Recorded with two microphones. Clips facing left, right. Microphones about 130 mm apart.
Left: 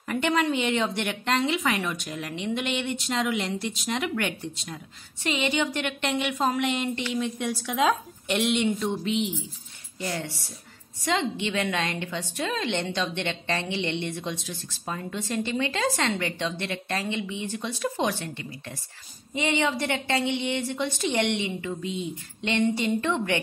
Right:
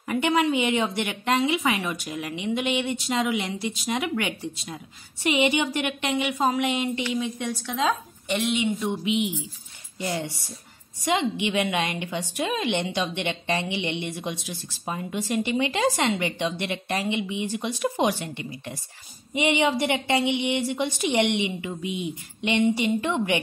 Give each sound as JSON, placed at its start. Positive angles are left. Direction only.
{"t": 0.1, "sound": "a woman's voice", "side_deg": -10}